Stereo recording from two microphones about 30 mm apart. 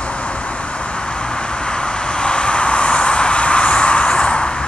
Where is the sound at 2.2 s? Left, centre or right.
Left.